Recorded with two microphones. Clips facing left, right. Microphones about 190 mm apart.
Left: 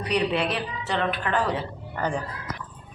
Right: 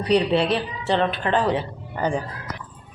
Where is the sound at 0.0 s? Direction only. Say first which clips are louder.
Right 5 dB; 30° right (ahead or behind).